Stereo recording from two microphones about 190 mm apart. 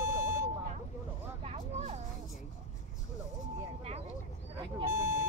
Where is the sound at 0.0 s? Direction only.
15° right (ahead or behind).